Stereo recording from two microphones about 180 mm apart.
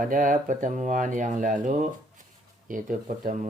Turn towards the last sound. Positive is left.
turn(degrees=-45)  # may be behind; listen again after turning